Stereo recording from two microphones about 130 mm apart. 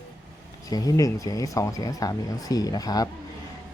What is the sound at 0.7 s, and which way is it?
Speech, 30° left (ahead or behind).